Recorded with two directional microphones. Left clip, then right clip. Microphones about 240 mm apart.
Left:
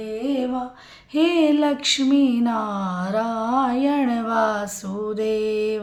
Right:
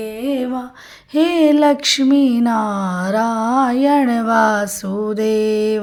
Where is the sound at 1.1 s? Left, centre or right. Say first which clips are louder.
Right 5 dB; right.